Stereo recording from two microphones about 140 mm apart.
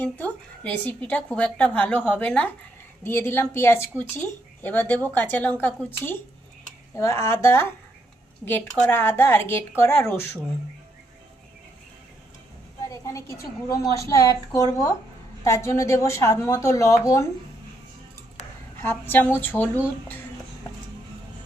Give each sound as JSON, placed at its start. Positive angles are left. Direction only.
{"t": 0.0, "sound": "a woman's voice", "side_deg": 10}
{"t": 12.9, "sound": "a woman's voice", "side_deg": 20}
{"t": 18.8, "sound": "a woman's voice", "side_deg": 15}